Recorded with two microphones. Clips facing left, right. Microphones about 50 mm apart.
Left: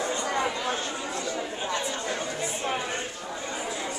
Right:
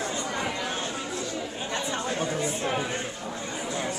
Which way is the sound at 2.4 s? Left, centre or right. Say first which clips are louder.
Right 1 dB; centre.